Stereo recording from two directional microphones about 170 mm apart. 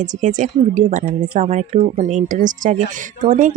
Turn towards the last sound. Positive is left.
turn(degrees=-45)  # may be behind; listen again after turning